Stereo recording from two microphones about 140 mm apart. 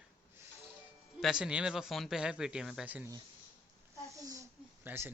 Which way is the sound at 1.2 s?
5° right (ahead or behind).